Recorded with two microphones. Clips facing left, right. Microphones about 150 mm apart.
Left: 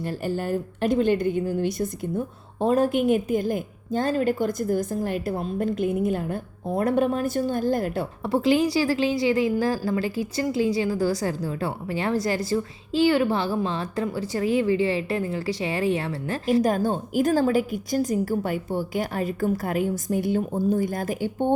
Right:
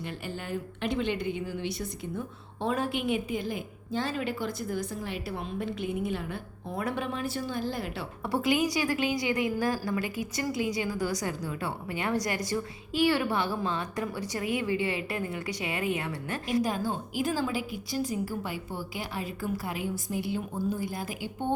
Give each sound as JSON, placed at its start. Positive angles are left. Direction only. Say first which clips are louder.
{"t": 0.0, "sound": "a woman's voice", "louder": "left 10 dB", "side_deg": 40}
{"t": 8.2, "sound": "a woman's voice", "louder": "left 6 dB", "side_deg": 25}
{"t": 17.2, "sound": "a woman's voice", "louder": "left 10 dB", "side_deg": 45}